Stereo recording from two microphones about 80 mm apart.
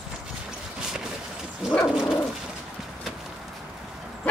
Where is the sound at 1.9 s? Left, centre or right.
Centre.